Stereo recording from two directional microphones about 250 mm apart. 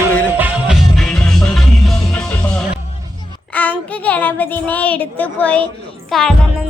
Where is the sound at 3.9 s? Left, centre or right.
Centre.